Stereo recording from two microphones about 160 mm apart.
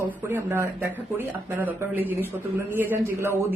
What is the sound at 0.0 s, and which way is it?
Speech, 10° right (ahead or behind).